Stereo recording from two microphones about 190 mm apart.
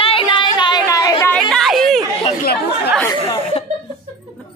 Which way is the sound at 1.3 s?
Centre (ahead or behind).